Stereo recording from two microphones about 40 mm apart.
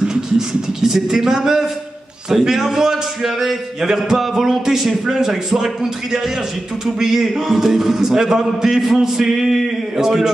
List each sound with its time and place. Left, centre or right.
0.1 s a man's voice: centre